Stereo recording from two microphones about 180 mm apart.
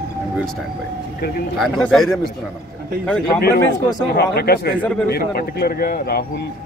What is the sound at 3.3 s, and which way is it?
Speech, 60° left (ahead or behind).